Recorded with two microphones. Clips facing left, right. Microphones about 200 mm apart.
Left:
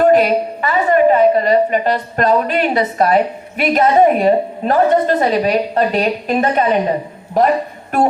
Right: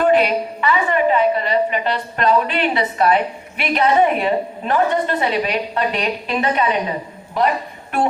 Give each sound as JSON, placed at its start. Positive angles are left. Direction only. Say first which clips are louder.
{"t": 0.0, "sound": "a woman's voice", "louder": "left 4 dB", "side_deg": 40}